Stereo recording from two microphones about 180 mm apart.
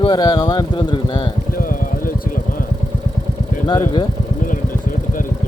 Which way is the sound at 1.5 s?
50° left (ahead or behind).